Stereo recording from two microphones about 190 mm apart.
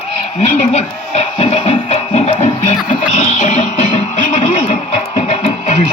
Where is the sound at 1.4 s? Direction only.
30° left (ahead or behind).